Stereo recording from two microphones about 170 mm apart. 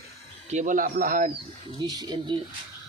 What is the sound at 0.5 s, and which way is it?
Speech, 50° right (ahead or behind).